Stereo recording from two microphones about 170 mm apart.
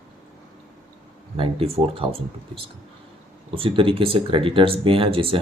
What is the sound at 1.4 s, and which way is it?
Speech, 30° right (ahead or behind).